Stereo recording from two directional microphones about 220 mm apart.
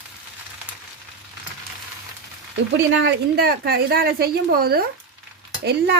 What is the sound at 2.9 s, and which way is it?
A woman's voice, 45° right (ahead or behind).